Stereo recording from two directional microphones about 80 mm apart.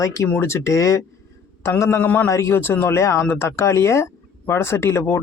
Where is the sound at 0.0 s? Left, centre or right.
Left.